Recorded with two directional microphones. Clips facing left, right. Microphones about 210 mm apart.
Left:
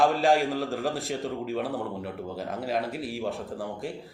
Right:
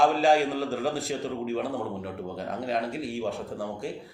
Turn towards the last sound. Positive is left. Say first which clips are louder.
# right 1 dB
turn(degrees=0)  # may be behind; listen again after turning